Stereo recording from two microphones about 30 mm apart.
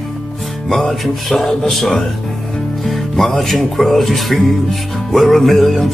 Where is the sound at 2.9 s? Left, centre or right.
Centre.